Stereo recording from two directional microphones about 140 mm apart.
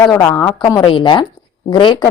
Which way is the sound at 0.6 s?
30° left (ahead or behind).